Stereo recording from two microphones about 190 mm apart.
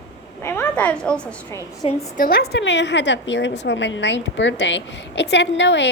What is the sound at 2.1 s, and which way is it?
A woman's voice, 50° left (ahead or behind).